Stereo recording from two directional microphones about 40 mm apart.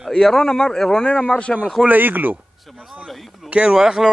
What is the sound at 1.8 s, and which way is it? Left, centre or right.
Speech, right.